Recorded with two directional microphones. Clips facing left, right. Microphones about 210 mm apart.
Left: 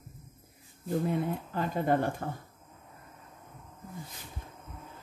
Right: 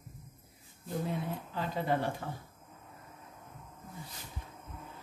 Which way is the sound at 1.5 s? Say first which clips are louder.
Left 4 dB; 50° left (ahead or behind).